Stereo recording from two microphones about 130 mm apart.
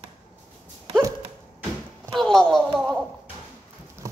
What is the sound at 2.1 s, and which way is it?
Speech, 5° left (ahead or behind).